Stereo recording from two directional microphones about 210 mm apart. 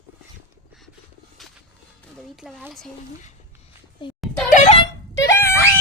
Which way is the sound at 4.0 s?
20° left (ahead or behind).